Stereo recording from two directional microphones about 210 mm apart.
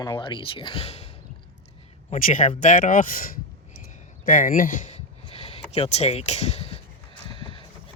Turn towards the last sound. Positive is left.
turn(degrees=25)  # may be behind; listen again after turning